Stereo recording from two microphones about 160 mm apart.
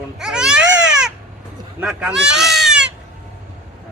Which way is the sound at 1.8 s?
5° right (ahead or behind).